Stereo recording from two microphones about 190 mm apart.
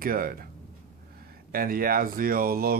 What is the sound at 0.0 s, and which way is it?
Speech, 50° right (ahead or behind).